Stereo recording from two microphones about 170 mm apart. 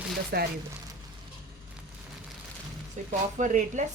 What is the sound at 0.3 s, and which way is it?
Speech, 65° right (ahead or behind).